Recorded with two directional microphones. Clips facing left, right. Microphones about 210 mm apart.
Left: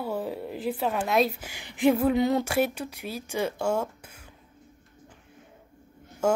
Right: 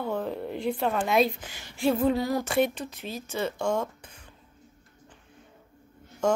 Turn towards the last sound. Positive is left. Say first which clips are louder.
# left 1 dB
turn(degrees=10)  # may be behind; listen again after turning